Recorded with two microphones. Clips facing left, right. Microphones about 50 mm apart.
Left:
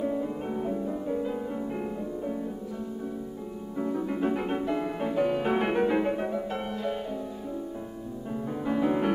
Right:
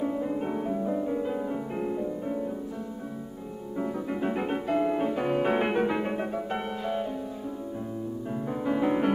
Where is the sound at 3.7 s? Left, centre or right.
Centre.